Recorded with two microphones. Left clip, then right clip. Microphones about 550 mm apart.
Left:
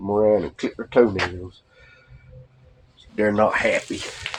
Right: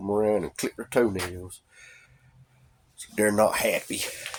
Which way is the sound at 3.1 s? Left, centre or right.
Right.